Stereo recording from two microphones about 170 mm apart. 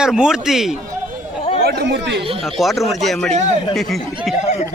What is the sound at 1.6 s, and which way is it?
Chatter, 85° right.